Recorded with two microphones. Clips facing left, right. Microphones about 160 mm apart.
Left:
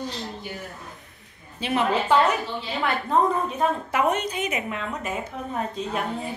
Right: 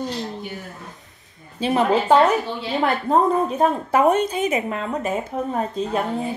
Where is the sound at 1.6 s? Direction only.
35° right (ahead or behind).